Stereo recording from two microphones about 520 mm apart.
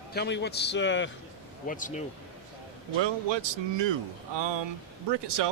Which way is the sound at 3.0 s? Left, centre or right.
Right.